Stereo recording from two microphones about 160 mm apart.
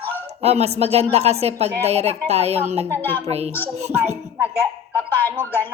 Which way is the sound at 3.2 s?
40° right (ahead or behind).